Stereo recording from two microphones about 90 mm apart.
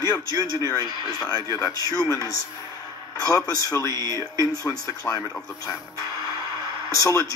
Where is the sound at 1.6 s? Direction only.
40° left (ahead or behind).